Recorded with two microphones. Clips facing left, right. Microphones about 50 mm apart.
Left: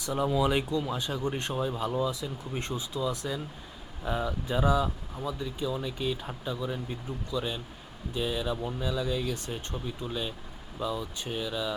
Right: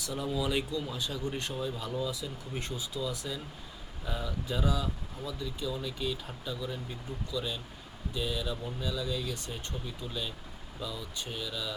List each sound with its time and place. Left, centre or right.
0.3 s speech: left